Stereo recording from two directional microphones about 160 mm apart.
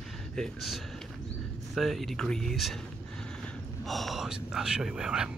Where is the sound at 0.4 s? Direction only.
Centre (ahead or behind).